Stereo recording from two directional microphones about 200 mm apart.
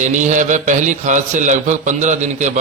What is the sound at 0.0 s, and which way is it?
A man's voice, 40° right (ahead or behind).